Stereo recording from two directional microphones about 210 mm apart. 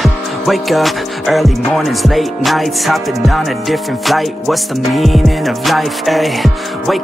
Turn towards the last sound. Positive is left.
turn(degrees=0)  # may be behind; listen again after turning